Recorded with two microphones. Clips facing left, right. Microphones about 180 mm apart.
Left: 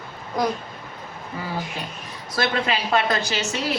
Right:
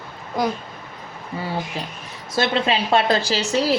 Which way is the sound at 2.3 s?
25° right (ahead or behind).